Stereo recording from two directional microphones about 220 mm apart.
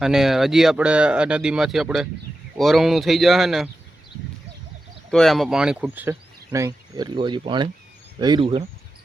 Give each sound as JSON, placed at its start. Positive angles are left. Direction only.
{"t": 0.0, "sound": "speech", "side_deg": 0}
{"t": 5.1, "sound": "speech", "side_deg": 0}